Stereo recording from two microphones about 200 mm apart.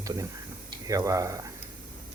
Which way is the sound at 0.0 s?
15° right (ahead or behind).